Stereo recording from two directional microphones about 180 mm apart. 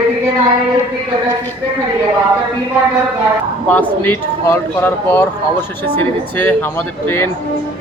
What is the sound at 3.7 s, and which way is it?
Speech, 10° left (ahead or behind).